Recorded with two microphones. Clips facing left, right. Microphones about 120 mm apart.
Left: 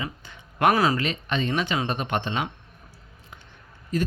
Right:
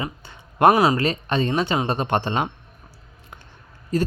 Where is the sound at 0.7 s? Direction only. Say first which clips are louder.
Right 4 dB; 20° right (ahead or behind).